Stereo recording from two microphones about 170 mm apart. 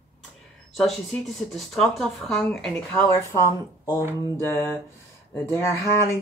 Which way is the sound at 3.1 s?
15° left (ahead or behind).